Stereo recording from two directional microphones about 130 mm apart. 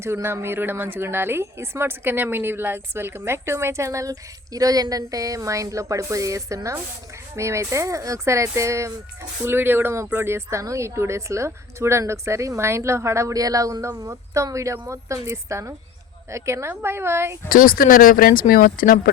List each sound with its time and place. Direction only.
0.0 s a woman's voice: 20° right (ahead or behind)
17.5 s speech: 90° left